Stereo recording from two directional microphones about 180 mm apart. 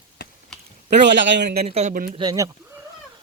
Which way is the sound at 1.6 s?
35° right (ahead or behind).